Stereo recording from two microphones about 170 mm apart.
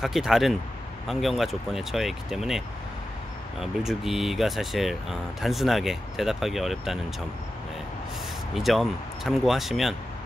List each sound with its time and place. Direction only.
0.0 s speech: centre (ahead or behind)
8.5 s speech: centre (ahead or behind)